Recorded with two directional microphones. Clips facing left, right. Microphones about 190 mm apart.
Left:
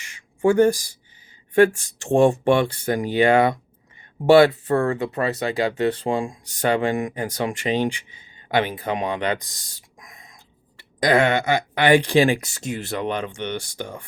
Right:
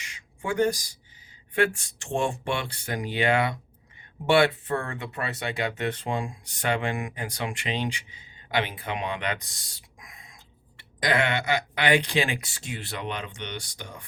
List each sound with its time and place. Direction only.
0.4 s speech: 50° left (ahead or behind)